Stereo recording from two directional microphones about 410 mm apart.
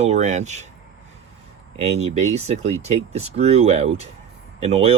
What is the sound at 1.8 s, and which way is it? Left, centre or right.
Speech, centre.